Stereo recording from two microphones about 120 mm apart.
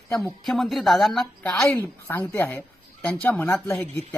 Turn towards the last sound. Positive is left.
turn(degrees=15)  # may be behind; listen again after turning